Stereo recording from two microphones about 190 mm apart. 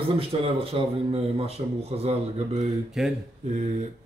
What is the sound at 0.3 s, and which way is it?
Speech, 30° right (ahead or behind).